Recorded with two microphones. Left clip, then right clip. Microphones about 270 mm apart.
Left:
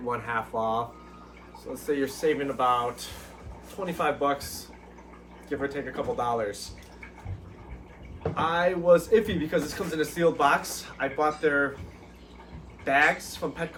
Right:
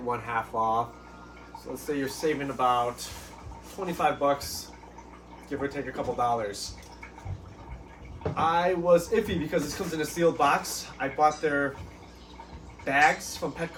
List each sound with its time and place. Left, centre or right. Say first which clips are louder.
0.1 s a man's voice: even; centre
1.9 s a man's voice: left 3 dB; centre
5.5 s a man's voice: left 1 dB; centre
8.2 s a man's voice: even; centre
12.8 s a man's voice: even; centre